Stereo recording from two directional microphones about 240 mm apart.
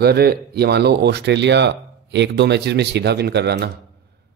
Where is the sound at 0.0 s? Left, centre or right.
Right.